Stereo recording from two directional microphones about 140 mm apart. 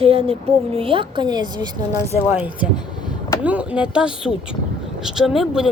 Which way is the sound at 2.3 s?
10° right (ahead or behind).